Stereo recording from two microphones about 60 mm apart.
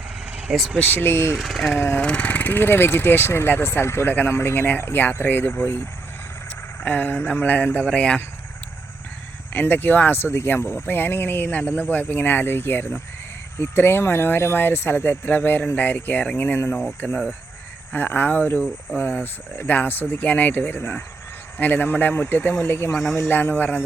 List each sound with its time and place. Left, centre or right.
0.3 s vehicle: right
0.8 s speech: left
1.4 s speech: centre
2.0 s speech: centre; by 4.1 s left
4.1 s a sound: left
4.4 s speech: left
6.7 s a sound: left
7.9 s speech: centre
9.5 s speech: left
17.0 s a sound: left
18.9 s speech: left